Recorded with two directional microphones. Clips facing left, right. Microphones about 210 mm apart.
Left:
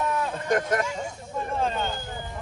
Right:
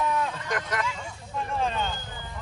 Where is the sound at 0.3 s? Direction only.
50° left (ahead or behind).